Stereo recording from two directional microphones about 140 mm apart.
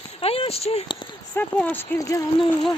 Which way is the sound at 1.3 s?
10° left (ahead or behind).